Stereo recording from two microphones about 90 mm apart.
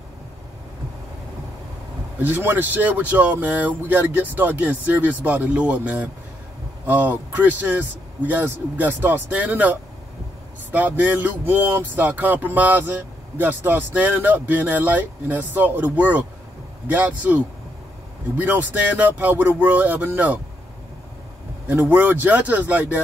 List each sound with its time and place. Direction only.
2.1 s a man's voice: 20° right (ahead or behind)
18.4 s speech: 20° right (ahead or behind)
21.6 s speech: 20° right (ahead or behind)